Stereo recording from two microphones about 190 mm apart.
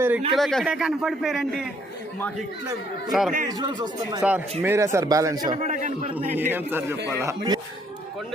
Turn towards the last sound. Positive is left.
turn(degrees=-20)  # may be behind; listen again after turning